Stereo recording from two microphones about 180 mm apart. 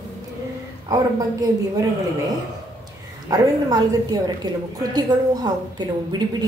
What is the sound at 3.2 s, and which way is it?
Speech, 20° right (ahead or behind).